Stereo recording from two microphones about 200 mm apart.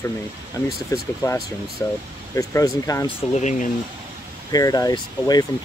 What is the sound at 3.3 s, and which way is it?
Speech, 35° left (ahead or behind).